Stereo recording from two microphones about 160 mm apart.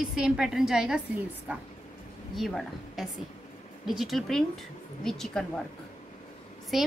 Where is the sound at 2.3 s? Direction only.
Centre (ahead or behind).